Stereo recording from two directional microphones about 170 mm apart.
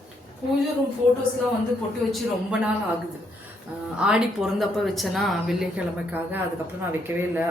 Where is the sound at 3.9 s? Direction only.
5° right (ahead or behind).